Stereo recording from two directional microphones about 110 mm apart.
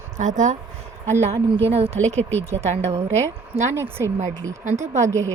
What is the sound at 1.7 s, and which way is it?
A woman's voice, 65° right (ahead or behind).